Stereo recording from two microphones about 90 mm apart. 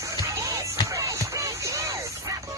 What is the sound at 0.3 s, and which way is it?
Music, 35° right (ahead or behind).